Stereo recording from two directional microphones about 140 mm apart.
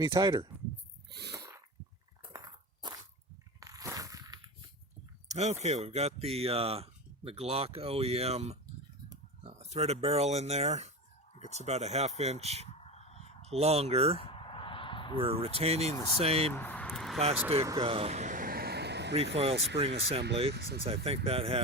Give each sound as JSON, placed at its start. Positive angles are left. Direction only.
{"t": 0.0, "sound": "speech", "side_deg": -30}
{"t": 2.3, "sound": "a sound", "side_deg": -30}
{"t": 5.3, "sound": "speech", "side_deg": -55}
{"t": 12.8, "sound": "crow", "side_deg": 50}
{"t": 13.5, "sound": "speech", "side_deg": -50}
{"t": 14.2, "sound": "a sound", "side_deg": 40}
{"t": 15.2, "sound": "speech", "side_deg": -45}
{"t": 16.5, "sound": "speech", "side_deg": 10}
{"t": 16.8, "sound": "vehicle", "side_deg": 0}
{"t": 17.7, "sound": "speech", "side_deg": -45}
{"t": 19.1, "sound": "speech", "side_deg": -45}
{"t": 20.6, "sound": "speech", "side_deg": -90}
{"t": 20.8, "sound": "speech", "side_deg": -45}